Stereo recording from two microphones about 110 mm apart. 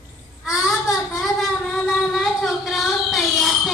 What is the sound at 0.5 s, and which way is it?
Child singing, 5° right (ahead or behind).